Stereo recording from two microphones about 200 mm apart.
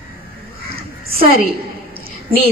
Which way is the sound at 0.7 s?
50° right (ahead or behind).